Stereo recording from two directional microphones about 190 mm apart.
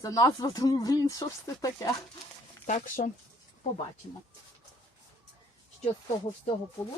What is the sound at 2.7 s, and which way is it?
Speech, 40° left (ahead or behind).